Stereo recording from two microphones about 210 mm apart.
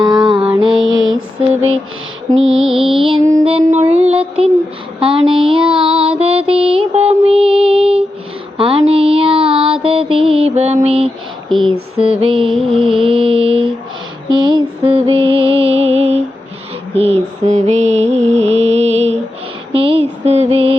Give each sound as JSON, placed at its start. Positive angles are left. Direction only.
{"t": 0.0, "sound": "mantra", "side_deg": -20}
{"t": 0.8, "sound": "mantra", "side_deg": -65}
{"t": 1.4, "sound": "a sound", "side_deg": -30}
{"t": 2.6, "sound": "music", "side_deg": 0}
{"t": 3.1, "sound": "music", "side_deg": -20}
{"t": 4.9, "sound": "a sound", "side_deg": -25}
{"t": 5.8, "sound": "music", "side_deg": -25}
{"t": 8.5, "sound": "mantra", "side_deg": -25}
{"t": 12.2, "sound": "a sound", "side_deg": -25}
{"t": 12.6, "sound": "mantra", "side_deg": -25}
{"t": 15.3, "sound": "music", "side_deg": -25}
{"t": 17.0, "sound": "mantra", "side_deg": -30}
{"t": 18.5, "sound": "music", "side_deg": -30}
{"t": 19.7, "sound": "a sound", "side_deg": -25}